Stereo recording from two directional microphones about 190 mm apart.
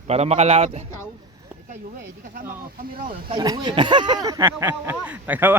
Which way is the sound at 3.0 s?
25° right (ahead or behind).